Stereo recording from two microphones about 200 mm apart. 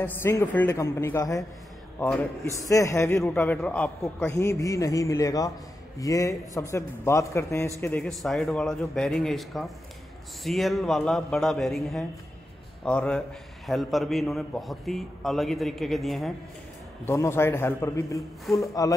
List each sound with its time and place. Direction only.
0.0 s a man's voice: 10° left (ahead or behind)
17.0 s a man's voice: 15° left (ahead or behind)